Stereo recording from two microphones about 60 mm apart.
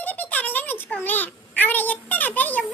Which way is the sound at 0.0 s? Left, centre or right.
Left.